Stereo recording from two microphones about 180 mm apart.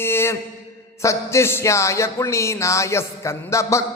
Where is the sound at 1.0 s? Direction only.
15° left (ahead or behind).